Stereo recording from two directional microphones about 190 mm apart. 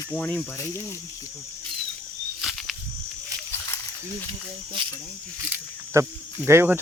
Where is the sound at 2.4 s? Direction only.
Centre (ahead or behind).